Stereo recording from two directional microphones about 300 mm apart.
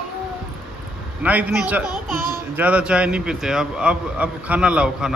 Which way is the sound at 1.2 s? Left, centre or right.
Centre.